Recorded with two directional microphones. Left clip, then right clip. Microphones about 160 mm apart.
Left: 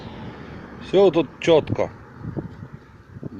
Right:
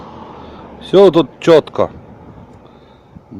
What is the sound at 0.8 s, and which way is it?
A man's voice, 50° right (ahead or behind).